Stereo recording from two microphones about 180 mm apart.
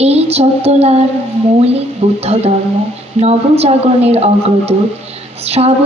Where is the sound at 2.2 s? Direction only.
35° right (ahead or behind).